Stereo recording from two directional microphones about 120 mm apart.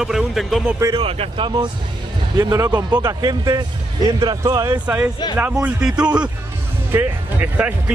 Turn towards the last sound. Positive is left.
turn(degrees=-15)  # may be behind; listen again after turning